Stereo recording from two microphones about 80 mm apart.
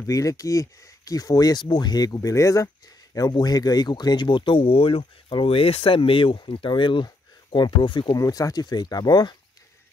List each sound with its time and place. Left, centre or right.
0.0 s speech: left
1.6 s speech: left
2.0 s speech: left
3.2 s speech: left
8.1 s speech: left